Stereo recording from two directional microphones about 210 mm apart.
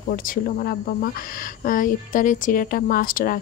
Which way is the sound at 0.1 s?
40° left (ahead or behind).